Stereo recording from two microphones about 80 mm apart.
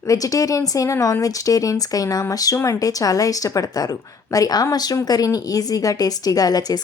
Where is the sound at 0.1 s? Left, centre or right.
Left.